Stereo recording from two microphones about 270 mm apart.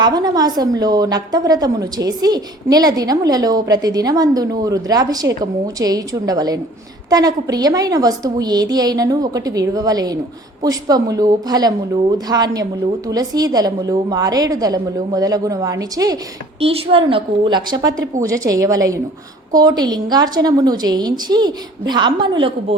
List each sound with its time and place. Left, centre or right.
0.0 s a woman's voice: centre